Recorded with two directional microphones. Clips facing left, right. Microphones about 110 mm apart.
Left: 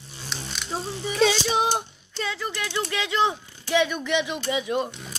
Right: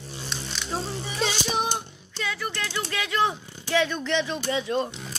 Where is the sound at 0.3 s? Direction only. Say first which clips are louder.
Left 1 dB; 5° left (ahead or behind).